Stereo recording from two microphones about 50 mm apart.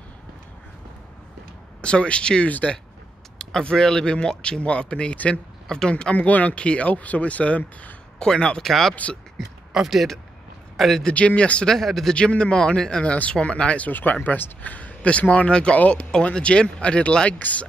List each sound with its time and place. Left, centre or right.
1.8 s speech: left
3.6 s speech: centre; by 5.4 s left
5.7 s speech: centre
6.1 s speech: left
8.2 s speech: centre
8.6 s speech: centre
8.9 s speech: left
9.7 s speech: centre
10.8 s speech: centre
11.1 s speech: left
11.6 s speech: centre
12.1 s speech: left
14.2 s speech: left